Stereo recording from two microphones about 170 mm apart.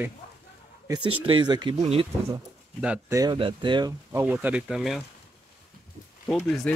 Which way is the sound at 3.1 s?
20° right (ahead or behind).